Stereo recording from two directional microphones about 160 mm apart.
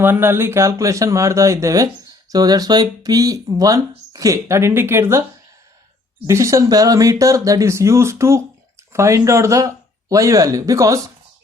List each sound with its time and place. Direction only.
0.0 s speech: 15° right (ahead or behind)
6.2 s speech: 20° right (ahead or behind)